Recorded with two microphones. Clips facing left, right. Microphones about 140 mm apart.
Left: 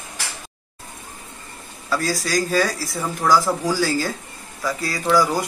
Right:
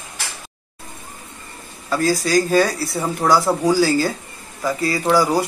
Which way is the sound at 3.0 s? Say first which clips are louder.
Right 1 dB; 25° right (ahead or behind).